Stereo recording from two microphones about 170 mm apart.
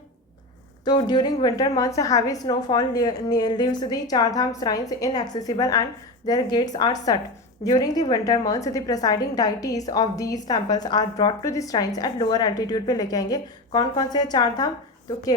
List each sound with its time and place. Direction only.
0.9 s a woman's voice: 25° left (ahead or behind)